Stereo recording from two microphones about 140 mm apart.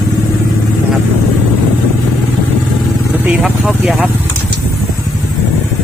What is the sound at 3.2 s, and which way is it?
Speech, 5° right (ahead or behind).